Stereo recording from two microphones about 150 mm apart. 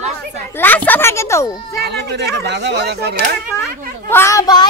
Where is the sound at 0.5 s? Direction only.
10° left (ahead or behind).